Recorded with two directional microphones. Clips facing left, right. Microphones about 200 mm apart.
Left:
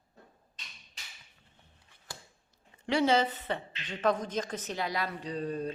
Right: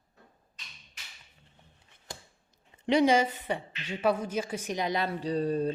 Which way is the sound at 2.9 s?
15° right (ahead or behind).